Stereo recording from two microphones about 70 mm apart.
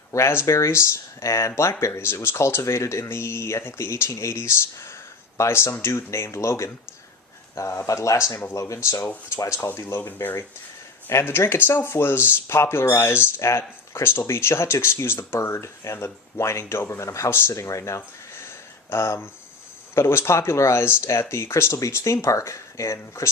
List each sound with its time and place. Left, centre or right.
0.1 s speech: left
9.7 s speech: left